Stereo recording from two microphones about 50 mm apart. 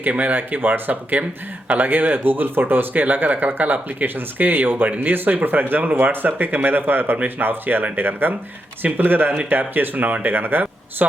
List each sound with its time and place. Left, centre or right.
0.1 s speech: right